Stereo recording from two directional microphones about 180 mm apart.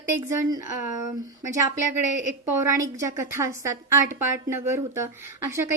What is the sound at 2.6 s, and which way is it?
A woman's voice, 15° right (ahead or behind).